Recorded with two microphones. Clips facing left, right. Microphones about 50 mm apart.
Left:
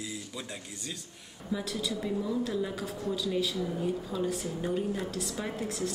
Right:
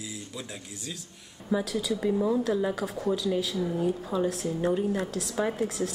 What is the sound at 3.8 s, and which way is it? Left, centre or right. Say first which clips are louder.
A woman's voice: right 5 dB; right.